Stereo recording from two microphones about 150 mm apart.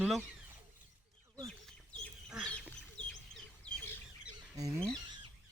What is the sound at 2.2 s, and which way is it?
Duck, 5° left (ahead or behind).